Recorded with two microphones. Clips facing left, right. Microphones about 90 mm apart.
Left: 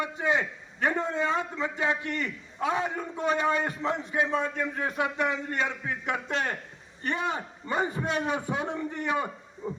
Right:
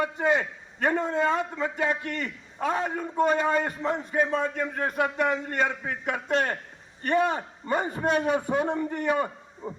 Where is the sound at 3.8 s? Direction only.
10° right (ahead or behind).